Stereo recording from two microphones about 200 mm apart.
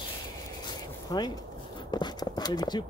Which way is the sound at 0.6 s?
20° left (ahead or behind).